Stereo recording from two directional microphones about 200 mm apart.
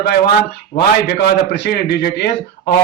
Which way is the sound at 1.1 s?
60° left (ahead or behind).